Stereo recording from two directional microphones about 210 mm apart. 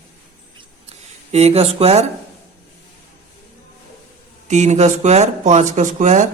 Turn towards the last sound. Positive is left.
turn(degrees=-35)  # may be behind; listen again after turning